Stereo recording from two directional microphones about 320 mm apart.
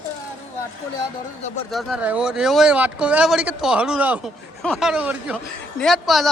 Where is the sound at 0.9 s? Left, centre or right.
Left.